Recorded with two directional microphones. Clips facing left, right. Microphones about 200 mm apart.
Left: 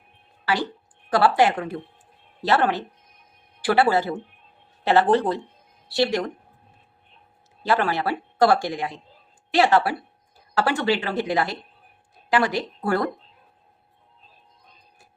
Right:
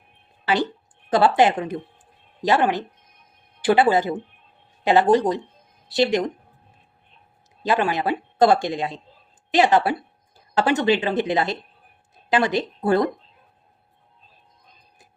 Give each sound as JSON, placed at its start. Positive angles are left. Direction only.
{"t": 1.1, "sound": "speech", "side_deg": -20}
{"t": 7.6, "sound": "speech", "side_deg": -15}